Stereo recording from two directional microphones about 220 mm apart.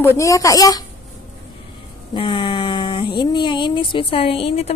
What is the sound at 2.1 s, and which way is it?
Speech, 20° left (ahead or behind).